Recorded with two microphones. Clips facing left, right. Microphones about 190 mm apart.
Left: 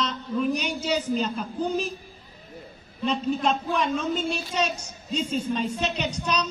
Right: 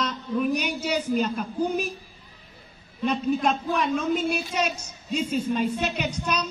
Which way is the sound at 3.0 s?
10° right (ahead or behind).